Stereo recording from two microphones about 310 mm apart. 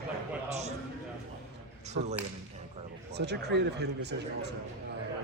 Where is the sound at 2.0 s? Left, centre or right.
Right.